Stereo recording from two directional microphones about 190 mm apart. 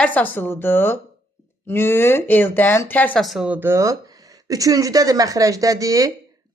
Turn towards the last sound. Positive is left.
turn(degrees=-20)  # may be behind; listen again after turning